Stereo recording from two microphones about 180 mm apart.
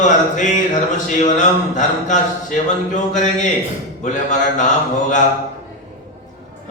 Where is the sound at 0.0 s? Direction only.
45° left (ahead or behind).